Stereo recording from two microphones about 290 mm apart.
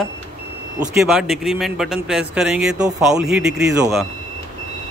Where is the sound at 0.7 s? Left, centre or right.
Centre.